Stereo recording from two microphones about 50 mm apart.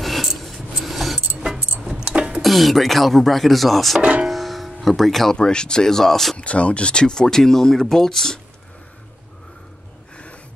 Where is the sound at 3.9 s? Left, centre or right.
Right.